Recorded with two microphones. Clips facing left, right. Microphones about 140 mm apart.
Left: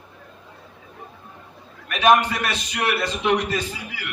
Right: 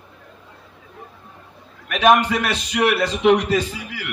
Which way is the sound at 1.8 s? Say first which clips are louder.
Right 2 dB; 90° right.